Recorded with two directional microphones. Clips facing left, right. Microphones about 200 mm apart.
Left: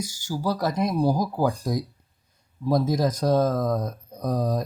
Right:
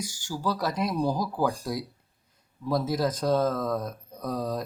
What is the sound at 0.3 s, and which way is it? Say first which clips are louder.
Speech: left 5 dB; 25° left (ahead or behind).